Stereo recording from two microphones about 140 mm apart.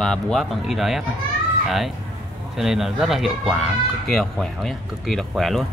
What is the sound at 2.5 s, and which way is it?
Speech, 5° right (ahead or behind).